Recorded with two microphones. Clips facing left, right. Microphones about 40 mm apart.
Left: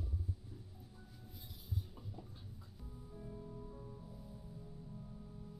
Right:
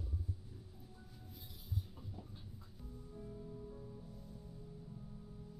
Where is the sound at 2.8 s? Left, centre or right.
Centre.